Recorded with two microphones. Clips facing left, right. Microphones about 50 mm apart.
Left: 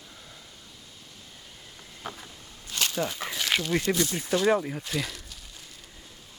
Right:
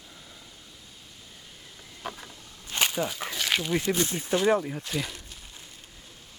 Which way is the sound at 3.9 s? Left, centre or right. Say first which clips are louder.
Even; right.